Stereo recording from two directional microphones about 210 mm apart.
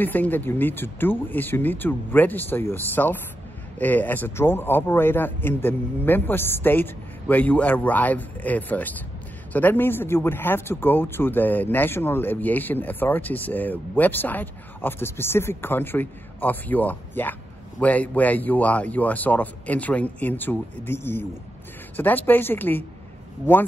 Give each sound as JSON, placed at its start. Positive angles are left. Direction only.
{"t": 0.0, "sound": "a man's voice", "side_deg": 10}